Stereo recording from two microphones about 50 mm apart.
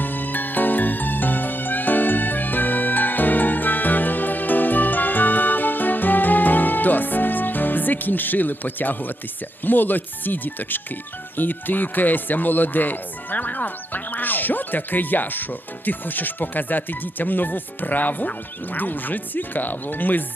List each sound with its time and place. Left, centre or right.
0.0 s music: left
9.6 s speech: left